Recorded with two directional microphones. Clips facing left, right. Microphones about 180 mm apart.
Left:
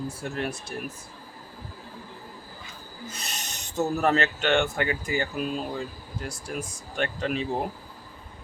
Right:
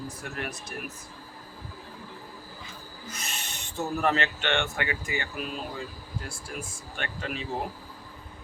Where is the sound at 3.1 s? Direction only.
35° left (ahead or behind).